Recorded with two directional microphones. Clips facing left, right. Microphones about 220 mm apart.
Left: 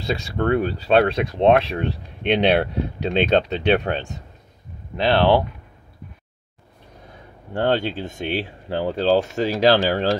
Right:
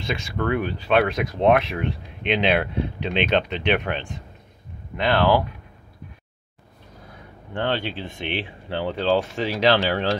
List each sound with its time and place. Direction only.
0.0 s speech: 35° left (ahead or behind)
7.5 s speech: 45° left (ahead or behind)